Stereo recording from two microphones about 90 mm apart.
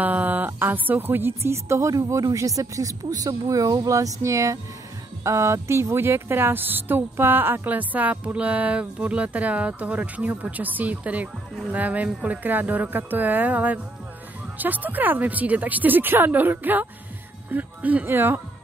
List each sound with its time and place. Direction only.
0.0 s speech: 20° right (ahead or behind)